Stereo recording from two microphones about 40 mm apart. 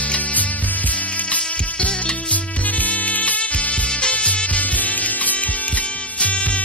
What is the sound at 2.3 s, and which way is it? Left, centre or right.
Music, left.